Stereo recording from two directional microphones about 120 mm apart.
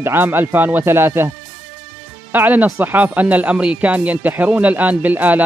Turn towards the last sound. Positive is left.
turn(degrees=-15)  # may be behind; listen again after turning